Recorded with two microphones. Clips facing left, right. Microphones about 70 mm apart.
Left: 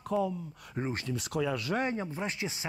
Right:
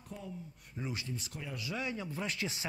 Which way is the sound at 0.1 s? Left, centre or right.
Left.